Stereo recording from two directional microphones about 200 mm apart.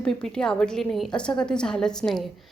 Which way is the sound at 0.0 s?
5° left (ahead or behind).